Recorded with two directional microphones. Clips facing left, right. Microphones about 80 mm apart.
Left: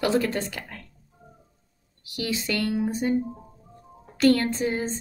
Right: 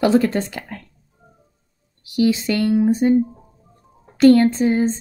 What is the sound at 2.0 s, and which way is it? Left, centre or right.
A woman's voice, right.